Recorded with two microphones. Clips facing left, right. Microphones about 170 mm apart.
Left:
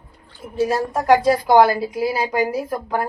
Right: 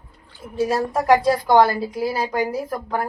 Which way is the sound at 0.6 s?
Centre (ahead or behind).